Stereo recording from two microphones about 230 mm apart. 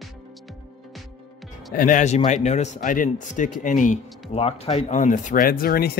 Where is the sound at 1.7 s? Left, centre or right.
Left.